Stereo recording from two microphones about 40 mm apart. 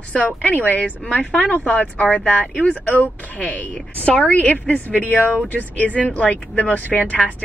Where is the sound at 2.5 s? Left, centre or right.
Left.